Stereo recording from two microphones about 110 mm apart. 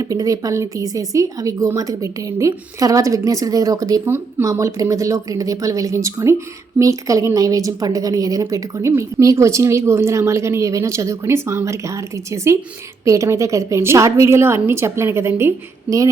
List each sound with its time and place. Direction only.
0.0 s a woman's voice: 35° right (ahead or behind)